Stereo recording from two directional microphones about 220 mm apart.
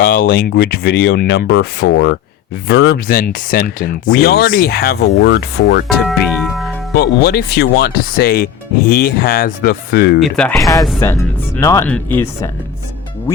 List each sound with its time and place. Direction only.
0.0 s speech: 40° left (ahead or behind)
6.0 s speech: centre (ahead or behind)
6.9 s speech: 45° left (ahead or behind)
10.2 s speech: centre (ahead or behind)
10.6 s speech: 15° left (ahead or behind)